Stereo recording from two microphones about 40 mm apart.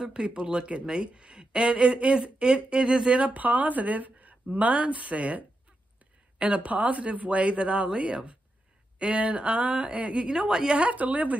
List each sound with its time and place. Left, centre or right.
0.0 s speech: right
6.4 s speech: right
10.8 s speech: right